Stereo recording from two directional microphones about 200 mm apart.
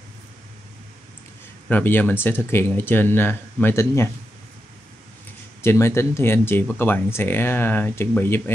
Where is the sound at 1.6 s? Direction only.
10° left (ahead or behind).